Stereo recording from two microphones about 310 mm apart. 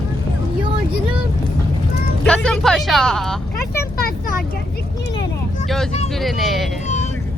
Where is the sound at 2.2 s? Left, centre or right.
Centre.